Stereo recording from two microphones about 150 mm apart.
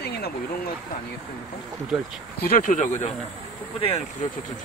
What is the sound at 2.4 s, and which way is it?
Speech, 70° left (ahead or behind).